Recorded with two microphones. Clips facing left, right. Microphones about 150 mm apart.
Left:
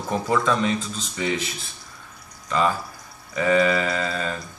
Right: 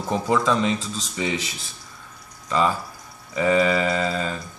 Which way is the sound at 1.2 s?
20° right (ahead or behind).